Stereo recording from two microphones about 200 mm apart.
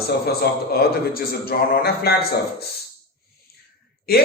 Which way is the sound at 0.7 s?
50° left (ahead or behind).